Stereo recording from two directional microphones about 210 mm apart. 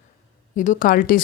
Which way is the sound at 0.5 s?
40° left (ahead or behind).